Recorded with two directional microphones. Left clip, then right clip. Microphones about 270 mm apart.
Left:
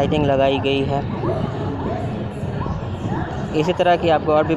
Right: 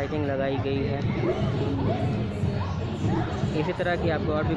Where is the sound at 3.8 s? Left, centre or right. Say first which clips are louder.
Left 12 dB; centre.